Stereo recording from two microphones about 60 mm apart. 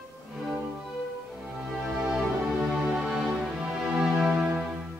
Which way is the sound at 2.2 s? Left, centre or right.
Centre.